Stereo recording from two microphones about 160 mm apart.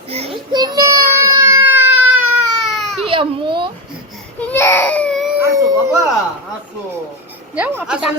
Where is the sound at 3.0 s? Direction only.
30° right (ahead or behind).